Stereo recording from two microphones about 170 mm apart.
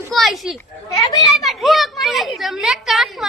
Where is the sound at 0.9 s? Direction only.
20° left (ahead or behind).